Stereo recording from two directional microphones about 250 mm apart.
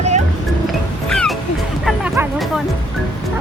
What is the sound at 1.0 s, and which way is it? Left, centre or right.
Music, centre.